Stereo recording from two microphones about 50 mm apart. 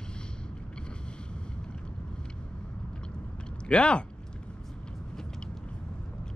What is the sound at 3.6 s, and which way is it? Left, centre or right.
Speech, left.